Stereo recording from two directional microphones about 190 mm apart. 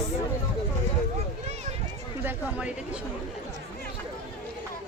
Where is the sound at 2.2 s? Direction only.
5° right (ahead or behind).